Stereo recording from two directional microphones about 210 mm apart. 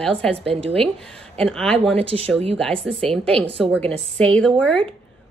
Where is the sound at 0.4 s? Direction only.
25° right (ahead or behind).